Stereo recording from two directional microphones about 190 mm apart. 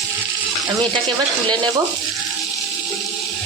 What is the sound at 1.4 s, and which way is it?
Speech, 25° right (ahead or behind).